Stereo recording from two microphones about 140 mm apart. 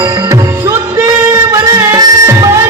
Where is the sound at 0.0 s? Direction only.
20° right (ahead or behind).